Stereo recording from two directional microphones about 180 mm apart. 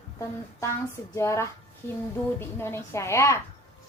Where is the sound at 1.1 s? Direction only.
15° left (ahead or behind).